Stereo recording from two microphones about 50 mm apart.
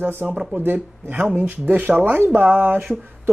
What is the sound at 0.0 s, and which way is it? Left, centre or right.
Speech, right.